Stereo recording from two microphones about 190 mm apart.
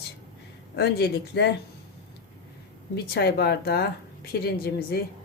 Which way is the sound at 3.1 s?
55° left (ahead or behind).